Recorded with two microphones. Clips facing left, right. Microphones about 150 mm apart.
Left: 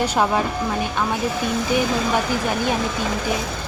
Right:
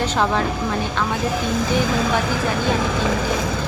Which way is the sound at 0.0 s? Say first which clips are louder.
Left 1 dB; 10° left (ahead or behind).